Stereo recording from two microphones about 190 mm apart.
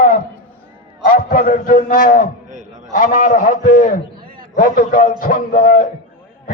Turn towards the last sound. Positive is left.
turn(degrees=45)  # may be behind; listen again after turning